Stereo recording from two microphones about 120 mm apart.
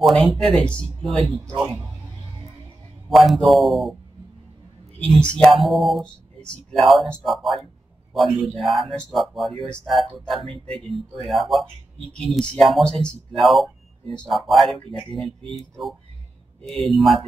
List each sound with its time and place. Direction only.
0.0 s speech: centre (ahead or behind)
3.1 s speech: centre (ahead or behind)
4.9 s speech: 10° left (ahead or behind)
16.6 s speech: centre (ahead or behind)